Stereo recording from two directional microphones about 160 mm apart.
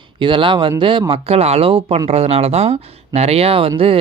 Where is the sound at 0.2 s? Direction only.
30° right (ahead or behind).